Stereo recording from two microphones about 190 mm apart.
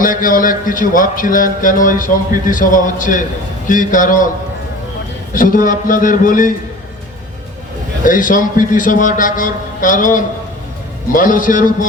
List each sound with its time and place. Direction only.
0.0 s speech: 45° left (ahead or behind)
5.3 s speech: 45° left (ahead or behind)
8.0 s speech: 45° left (ahead or behind)